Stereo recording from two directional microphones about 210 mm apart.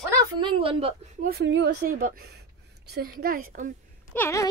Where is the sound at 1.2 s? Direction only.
50° right (ahead or behind).